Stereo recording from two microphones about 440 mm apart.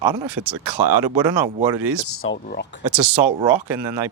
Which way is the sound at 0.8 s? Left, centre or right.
Right.